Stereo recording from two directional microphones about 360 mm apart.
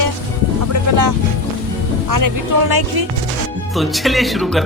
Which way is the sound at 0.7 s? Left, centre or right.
Right.